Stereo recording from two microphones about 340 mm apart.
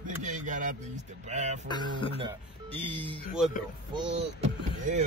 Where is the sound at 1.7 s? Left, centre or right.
Centre.